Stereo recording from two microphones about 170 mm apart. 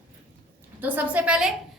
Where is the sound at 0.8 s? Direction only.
10° right (ahead or behind).